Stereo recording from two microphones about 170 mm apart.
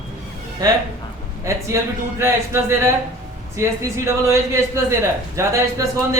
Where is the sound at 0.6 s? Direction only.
20° right (ahead or behind).